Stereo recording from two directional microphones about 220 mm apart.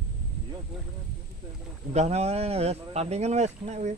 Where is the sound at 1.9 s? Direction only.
30° right (ahead or behind).